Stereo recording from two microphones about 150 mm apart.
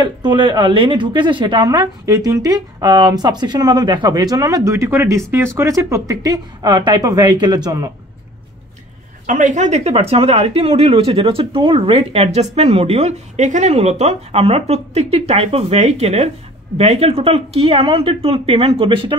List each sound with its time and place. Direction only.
0.0 s speech: 30° right (ahead or behind)
9.2 s speech: 60° right (ahead or behind); by 19.1 s 35° right (ahead or behind)